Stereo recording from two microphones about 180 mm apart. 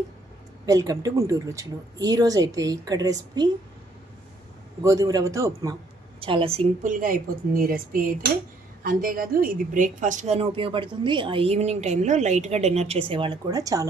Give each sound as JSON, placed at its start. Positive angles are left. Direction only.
{"t": 0.7, "sound": "speech", "side_deg": -20}
{"t": 4.8, "sound": "a man's voice", "side_deg": -20}
{"t": 6.1, "sound": "a woman's voice", "side_deg": -30}